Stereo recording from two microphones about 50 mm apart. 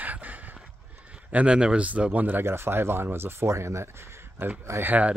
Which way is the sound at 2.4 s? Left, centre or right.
Right.